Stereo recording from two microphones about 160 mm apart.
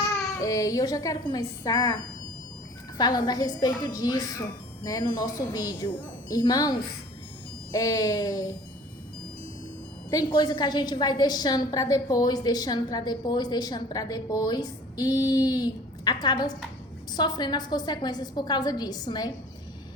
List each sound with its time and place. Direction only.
0.4 s a woman's voice: 20° left (ahead or behind)
3.0 s a woman's voice: 25° left (ahead or behind)
10.1 s a woman's voice: 25° left (ahead or behind)